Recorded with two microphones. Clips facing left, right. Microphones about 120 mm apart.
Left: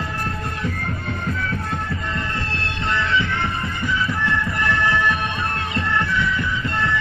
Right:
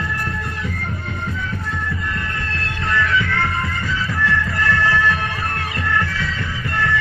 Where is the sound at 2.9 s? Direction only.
25° left (ahead or behind).